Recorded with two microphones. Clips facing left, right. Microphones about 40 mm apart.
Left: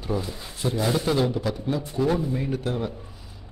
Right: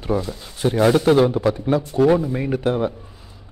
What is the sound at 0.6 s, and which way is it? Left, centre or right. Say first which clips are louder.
Speech: right 9 dB; right.